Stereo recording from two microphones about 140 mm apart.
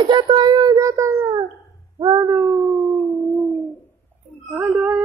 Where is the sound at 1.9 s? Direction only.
30° right (ahead or behind).